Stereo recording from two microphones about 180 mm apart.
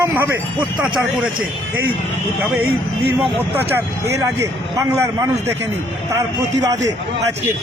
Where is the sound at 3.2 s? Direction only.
10° right (ahead or behind).